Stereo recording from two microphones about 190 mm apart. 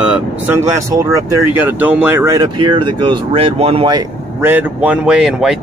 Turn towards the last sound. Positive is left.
turn(degrees=-5)  # may be behind; listen again after turning